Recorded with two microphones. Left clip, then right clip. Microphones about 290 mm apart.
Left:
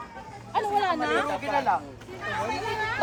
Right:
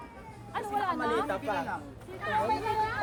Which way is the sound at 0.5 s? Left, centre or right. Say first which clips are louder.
Left 7 dB; left.